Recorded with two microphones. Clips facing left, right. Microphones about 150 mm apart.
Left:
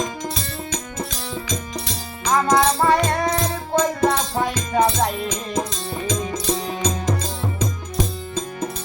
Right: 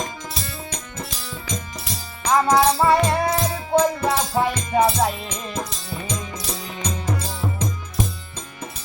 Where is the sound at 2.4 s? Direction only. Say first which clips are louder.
Even; centre (ahead or behind).